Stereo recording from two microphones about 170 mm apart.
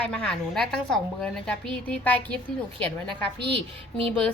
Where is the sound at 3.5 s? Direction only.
30° right (ahead or behind).